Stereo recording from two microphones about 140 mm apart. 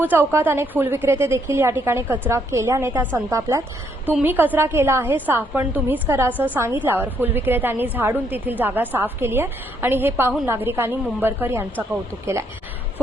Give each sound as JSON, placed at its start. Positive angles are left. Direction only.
{"t": 0.0, "sound": "a woman's voice", "side_deg": -15}